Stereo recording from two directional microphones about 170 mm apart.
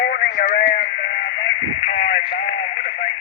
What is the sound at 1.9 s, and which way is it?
Radio, 45° left (ahead or behind).